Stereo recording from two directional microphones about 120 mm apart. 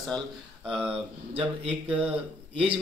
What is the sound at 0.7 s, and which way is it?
Speech, 10° right (ahead or behind).